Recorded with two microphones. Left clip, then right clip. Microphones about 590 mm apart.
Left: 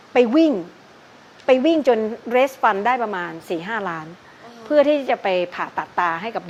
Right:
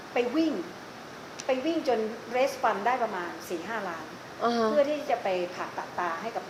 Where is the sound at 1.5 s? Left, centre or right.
Left.